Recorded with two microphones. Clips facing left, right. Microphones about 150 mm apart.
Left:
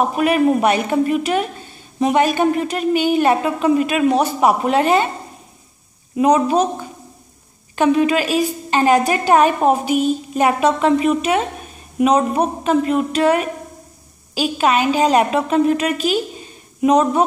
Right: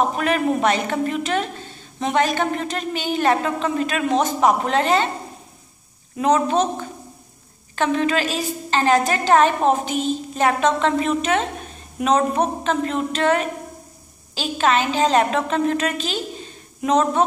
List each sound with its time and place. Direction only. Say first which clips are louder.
0.0 s a woman's voice: left 4 dB; 10° left (ahead or behind)
6.1 s a woman's voice: left 4 dB; 10° left (ahead or behind)